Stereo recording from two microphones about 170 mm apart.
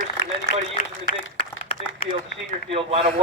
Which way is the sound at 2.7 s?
35° right (ahead or behind).